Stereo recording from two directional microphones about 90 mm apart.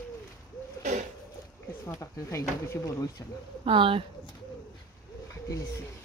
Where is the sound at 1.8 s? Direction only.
30° left (ahead or behind).